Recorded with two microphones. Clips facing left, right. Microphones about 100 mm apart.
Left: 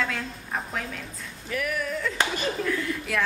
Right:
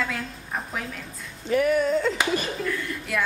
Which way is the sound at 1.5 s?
25° right (ahead or behind).